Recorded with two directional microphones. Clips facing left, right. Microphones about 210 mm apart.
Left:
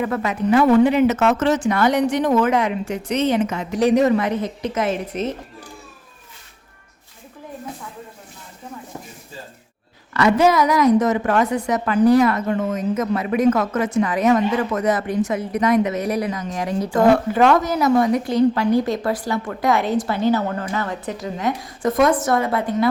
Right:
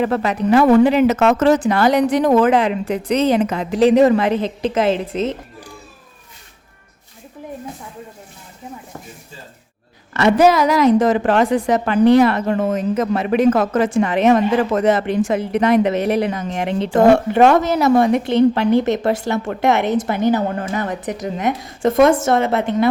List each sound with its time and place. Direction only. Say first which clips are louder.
0.0 s speech: right 3 dB; 30° right (ahead or behind)
0.9 s speech: right 2 dB; 90° right
1.7 s speech: right 3 dB; 35° right (ahead or behind)
10.5 s speech: right 2 dB; 30° right (ahead or behind)